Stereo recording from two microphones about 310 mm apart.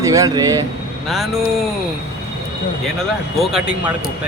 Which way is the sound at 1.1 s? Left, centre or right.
Centre.